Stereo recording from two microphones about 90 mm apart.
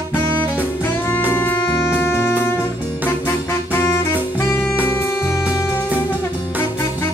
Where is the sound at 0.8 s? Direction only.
25° left (ahead or behind).